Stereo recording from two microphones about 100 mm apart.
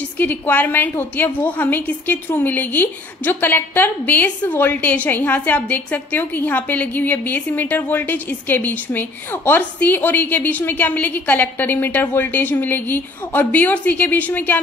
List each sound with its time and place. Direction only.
0.2 s a woman's voice: 20° left (ahead or behind)